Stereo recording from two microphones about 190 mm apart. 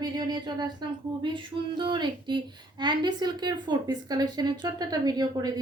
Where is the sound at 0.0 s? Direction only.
20° right (ahead or behind).